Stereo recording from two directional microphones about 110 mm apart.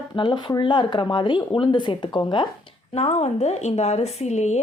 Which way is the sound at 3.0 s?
70° left (ahead or behind).